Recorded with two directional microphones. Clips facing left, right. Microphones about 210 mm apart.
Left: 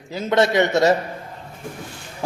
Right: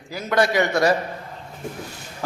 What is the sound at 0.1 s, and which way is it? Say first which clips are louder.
Speech: left 2 dB; 25° left (ahead or behind).